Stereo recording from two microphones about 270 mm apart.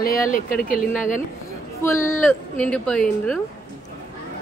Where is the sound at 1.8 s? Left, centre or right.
Centre.